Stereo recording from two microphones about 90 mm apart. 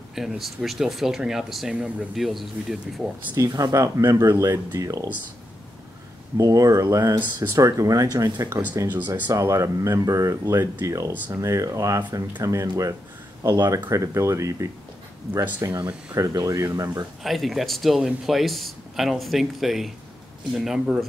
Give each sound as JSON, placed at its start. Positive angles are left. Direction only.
{"t": 0.1, "sound": "speech", "side_deg": -5}
{"t": 3.3, "sound": "speech", "side_deg": -40}
{"t": 6.3, "sound": "speech", "side_deg": -40}
{"t": 8.8, "sound": "speech", "side_deg": -20}
{"t": 9.3, "sound": "speech", "side_deg": -35}
{"t": 17.2, "sound": "speech", "side_deg": 0}